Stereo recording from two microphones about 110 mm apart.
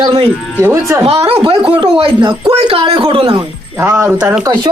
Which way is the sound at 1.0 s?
65° right (ahead or behind).